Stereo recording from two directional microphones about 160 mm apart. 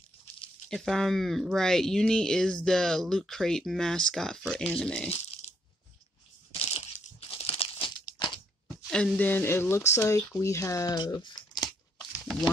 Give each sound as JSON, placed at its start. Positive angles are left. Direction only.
{"t": 0.7, "sound": "speech", "side_deg": 0}
{"t": 5.4, "sound": "coin", "side_deg": 40}
{"t": 6.5, "sound": "crunch", "side_deg": 35}
{"t": 8.6, "sound": "speech", "side_deg": 5}
{"t": 12.0, "sound": "a sound", "side_deg": 0}